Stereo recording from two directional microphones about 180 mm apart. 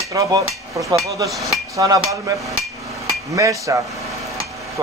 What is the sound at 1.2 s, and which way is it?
Hammer, centre (ahead or behind).